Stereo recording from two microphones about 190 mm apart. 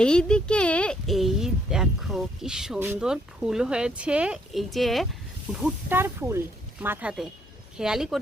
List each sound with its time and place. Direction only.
0.0 s speech: 5° left (ahead or behind)